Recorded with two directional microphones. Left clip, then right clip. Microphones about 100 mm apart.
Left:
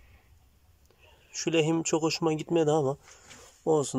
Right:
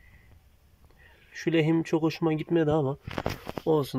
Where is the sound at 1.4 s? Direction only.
5° right (ahead or behind).